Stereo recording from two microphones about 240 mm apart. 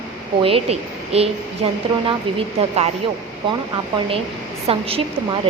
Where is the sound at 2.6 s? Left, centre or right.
Right.